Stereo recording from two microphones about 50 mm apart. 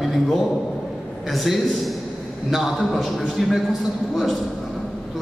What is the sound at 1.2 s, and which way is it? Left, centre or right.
A man's voice, centre.